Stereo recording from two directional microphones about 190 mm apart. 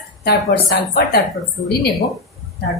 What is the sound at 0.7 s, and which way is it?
Speech, 50° left (ahead or behind).